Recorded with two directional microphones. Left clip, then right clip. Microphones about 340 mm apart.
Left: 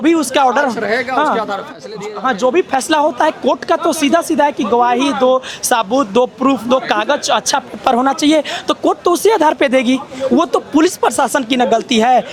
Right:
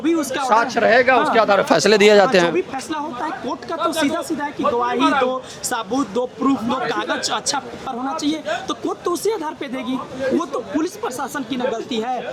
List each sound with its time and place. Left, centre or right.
0.0 s speech: left
0.8 s speech: centre
1.7 s speech: right
2.4 s speech: left